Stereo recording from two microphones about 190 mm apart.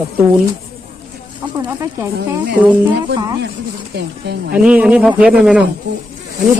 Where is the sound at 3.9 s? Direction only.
60° right (ahead or behind).